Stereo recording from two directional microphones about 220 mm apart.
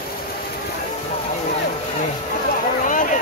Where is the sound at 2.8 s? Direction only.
35° left (ahead or behind).